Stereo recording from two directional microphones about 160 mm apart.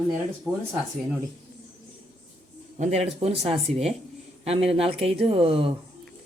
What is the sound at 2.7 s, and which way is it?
Speech, 40° right (ahead or behind).